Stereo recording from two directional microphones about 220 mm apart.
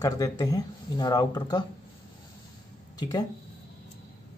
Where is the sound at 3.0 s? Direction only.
15° left (ahead or behind).